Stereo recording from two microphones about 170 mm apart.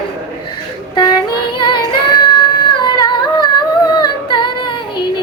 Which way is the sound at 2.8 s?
25° left (ahead or behind).